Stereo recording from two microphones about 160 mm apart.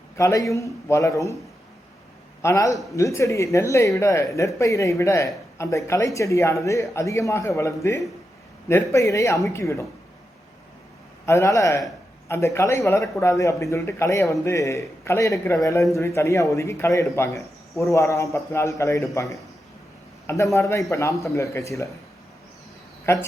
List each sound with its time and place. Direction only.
0.2 s a man's voice: 20° left (ahead or behind)
2.4 s a man's voice: 20° left (ahead or behind)
11.3 s a man's voice: 20° left (ahead or behind)
23.1 s a man's voice: 15° left (ahead or behind)